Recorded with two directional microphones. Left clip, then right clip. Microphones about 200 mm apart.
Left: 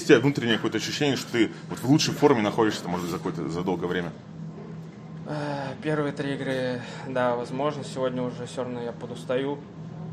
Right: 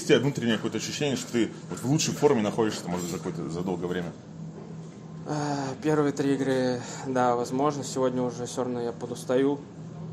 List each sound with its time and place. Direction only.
0.0 s speech: 15° left (ahead or behind)
5.3 s speech: 50° right (ahead or behind)